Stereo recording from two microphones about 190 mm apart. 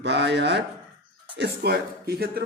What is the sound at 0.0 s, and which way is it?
Speech, 65° right (ahead or behind).